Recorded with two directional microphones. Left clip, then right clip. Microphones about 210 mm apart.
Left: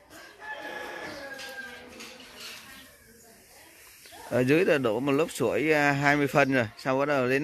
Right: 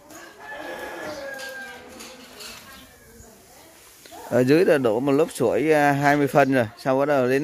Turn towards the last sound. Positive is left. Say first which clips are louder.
# right 5 dB
turn(degrees=-15)  # may be behind; listen again after turning